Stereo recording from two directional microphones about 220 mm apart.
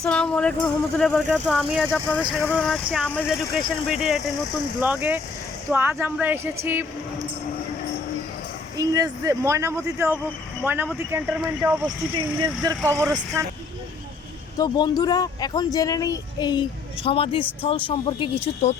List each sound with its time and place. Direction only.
0.0 s speech: 5° left (ahead or behind)
8.8 s speech: 15° right (ahead or behind)
14.6 s speech: 20° left (ahead or behind)